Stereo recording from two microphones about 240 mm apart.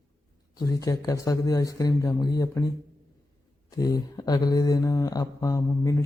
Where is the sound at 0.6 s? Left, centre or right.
Centre.